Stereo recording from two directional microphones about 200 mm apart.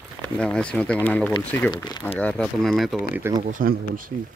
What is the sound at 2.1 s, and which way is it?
Speech, 5° left (ahead or behind).